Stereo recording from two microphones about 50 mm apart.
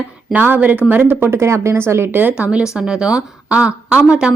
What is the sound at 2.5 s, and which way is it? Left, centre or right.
A woman's voice, centre.